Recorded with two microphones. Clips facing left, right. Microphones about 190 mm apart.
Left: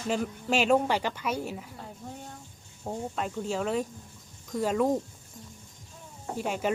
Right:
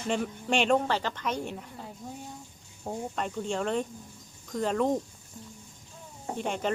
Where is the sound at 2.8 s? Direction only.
5° left (ahead or behind).